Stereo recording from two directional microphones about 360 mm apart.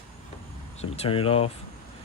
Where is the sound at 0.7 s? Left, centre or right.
Centre.